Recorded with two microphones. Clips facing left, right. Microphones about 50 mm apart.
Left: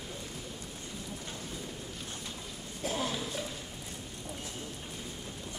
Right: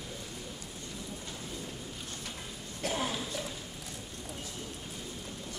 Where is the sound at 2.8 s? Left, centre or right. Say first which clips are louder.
Right 1 dB; right.